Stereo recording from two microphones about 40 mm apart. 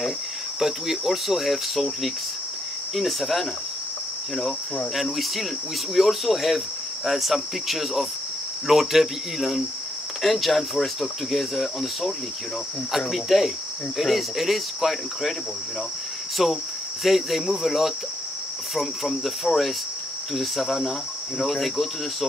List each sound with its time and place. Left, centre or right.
0.6 s speech: centre
4.9 s speech: centre
16.4 s speech: centre